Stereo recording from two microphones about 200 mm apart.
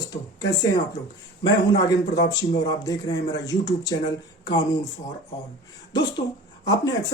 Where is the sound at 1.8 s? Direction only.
20° left (ahead or behind).